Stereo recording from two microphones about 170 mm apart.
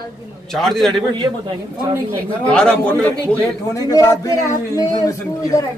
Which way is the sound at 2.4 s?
5° left (ahead or behind).